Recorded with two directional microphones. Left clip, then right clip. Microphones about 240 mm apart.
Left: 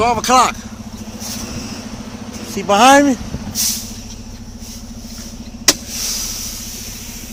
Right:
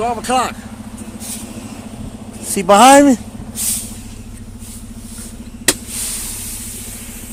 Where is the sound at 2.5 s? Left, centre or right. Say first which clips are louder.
Right 2 dB; right.